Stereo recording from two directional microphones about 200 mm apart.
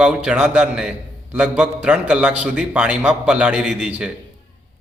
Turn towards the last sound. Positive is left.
turn(degrees=-5)  # may be behind; listen again after turning